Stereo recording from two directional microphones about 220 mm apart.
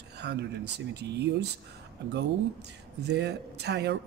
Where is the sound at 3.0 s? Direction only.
50° right (ahead or behind).